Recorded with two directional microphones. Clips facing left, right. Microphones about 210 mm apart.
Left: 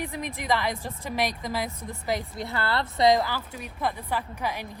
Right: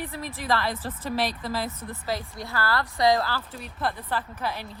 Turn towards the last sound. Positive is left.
turn(degrees=15)  # may be behind; listen again after turning